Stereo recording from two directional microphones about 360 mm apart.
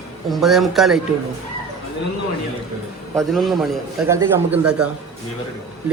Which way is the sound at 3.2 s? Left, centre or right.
Centre.